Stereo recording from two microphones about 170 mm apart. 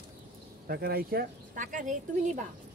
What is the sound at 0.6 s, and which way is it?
Speech, 65° right (ahead or behind).